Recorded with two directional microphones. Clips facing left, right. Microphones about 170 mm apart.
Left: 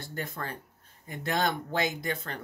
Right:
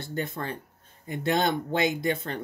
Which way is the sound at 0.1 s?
25° right (ahead or behind).